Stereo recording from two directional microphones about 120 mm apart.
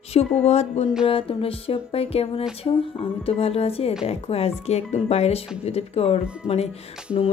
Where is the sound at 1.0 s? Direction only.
50° left (ahead or behind).